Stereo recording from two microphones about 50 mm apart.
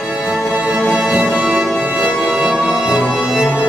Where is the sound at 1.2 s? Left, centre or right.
Centre.